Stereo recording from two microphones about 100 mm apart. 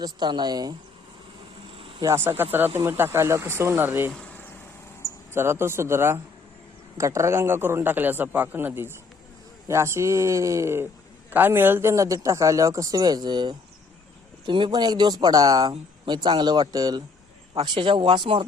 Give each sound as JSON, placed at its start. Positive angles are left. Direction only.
{"t": 0.0, "sound": "speech", "side_deg": -45}
{"t": 1.7, "sound": "vehicle", "side_deg": -65}
{"t": 2.1, "sound": "speech", "side_deg": -25}
{"t": 4.1, "sound": "vehicle", "side_deg": 10}
{"t": 5.3, "sound": "a man's voice", "side_deg": -25}
{"t": 17.6, "sound": "speech", "side_deg": -55}